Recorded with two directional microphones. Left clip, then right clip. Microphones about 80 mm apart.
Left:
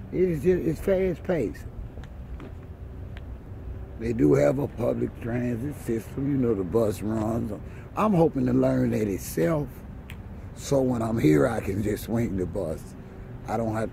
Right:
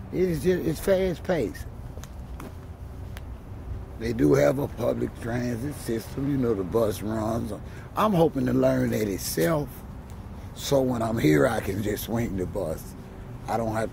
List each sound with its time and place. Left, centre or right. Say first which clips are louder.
0.1 s speech: left 1 dB; centre
0.4 s speech: left 1 dB; left
4.0 s speech: left 1 dB; left
4.3 s speech: right 1 dB; left
4.9 s speech: even; left
6.7 s speech: even; left
7.2 s speech: even; left
11.8 s speech: left 1 dB; left